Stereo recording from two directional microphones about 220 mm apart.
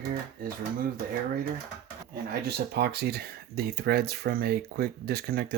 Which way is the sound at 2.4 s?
45° right (ahead or behind).